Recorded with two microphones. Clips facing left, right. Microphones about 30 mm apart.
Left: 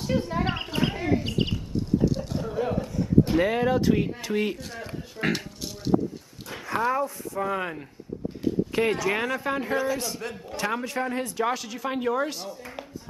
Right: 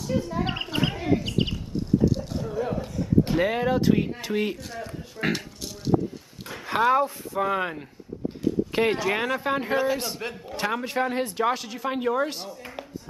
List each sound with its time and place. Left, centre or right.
0.1 s speech: left
0.5 s wild animals: centre
1.0 s a sound: centre
3.3 s speech: centre
5.9 s a sound: centre
6.7 s speech: right
7.3 s a man's voice: centre
8.7 s a man's voice: right
11.4 s speech: centre
12.4 s a sound: centre